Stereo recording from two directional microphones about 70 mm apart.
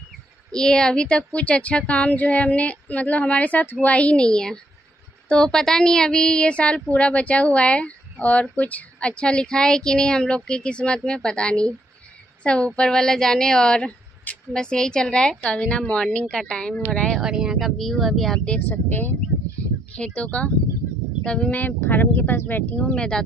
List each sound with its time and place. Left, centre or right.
0.5 s a woman's voice: centre
17.2 s speech: centre
18.7 s a woman's voice: left
21.2 s speech: centre
21.5 s a woman's voice: left
22.8 s speech: centre